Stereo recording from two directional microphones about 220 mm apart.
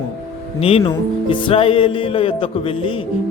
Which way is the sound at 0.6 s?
25° left (ahead or behind).